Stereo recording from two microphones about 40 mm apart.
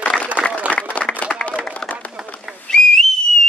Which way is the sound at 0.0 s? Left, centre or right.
Left.